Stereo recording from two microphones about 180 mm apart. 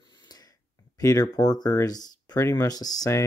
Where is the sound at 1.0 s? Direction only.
20° left (ahead or behind).